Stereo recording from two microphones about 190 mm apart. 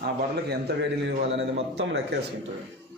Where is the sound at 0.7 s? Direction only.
60° right (ahead or behind).